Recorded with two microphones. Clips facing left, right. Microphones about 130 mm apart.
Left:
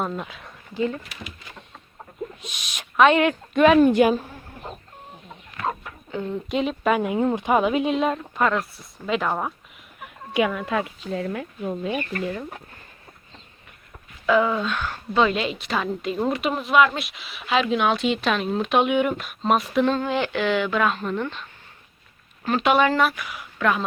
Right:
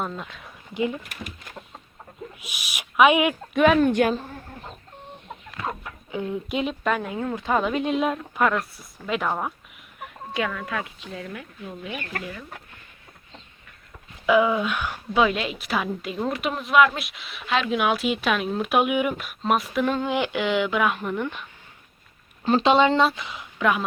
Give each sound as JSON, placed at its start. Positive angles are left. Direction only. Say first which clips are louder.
{"t": 0.0, "sound": "a woman's voice", "louder": "left 3 dB", "side_deg": 5}
{"t": 0.7, "sound": "speech", "louder": "left 1 dB", "side_deg": -15}
{"t": 1.0, "sound": "speech", "louder": "right 1 dB", "side_deg": -50}
{"t": 2.4, "sound": "speech", "louder": "even", "side_deg": -5}
{"t": 6.1, "sound": "a woman's voice", "louder": "left 1 dB", "side_deg": -10}
{"t": 7.0, "sound": "speech", "louder": "left 6 dB", "side_deg": 20}
{"t": 7.6, "sound": "a woman's voice", "louder": "left 2 dB", "side_deg": 5}
{"t": 10.3, "sound": "speech", "louder": "left 5 dB", "side_deg": 15}
{"t": 12.1, "sound": "speech", "louder": "left 5 dB", "side_deg": -90}
{"t": 14.3, "sound": "a woman's voice", "louder": "right 1 dB", "side_deg": -10}
{"t": 19.9, "sound": "speech", "louder": "left 1 dB", "side_deg": -15}
{"t": 22.4, "sound": "speech", "louder": "right 1 dB", "side_deg": -25}